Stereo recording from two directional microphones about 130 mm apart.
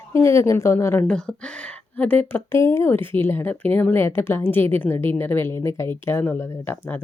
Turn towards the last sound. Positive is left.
turn(degrees=15)  # may be behind; listen again after turning